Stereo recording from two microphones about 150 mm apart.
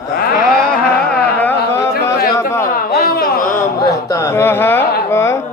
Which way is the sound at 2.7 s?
90° left.